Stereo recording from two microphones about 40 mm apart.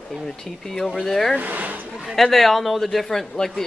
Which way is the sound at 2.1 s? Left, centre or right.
Centre.